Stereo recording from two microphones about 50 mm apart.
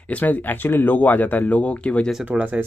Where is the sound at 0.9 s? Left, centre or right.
Left.